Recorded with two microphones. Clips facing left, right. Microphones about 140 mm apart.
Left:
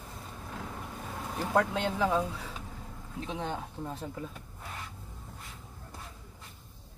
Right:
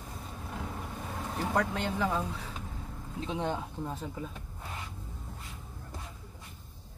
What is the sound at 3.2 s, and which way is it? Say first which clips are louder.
Speech: right 3 dB; 15° right (ahead or behind).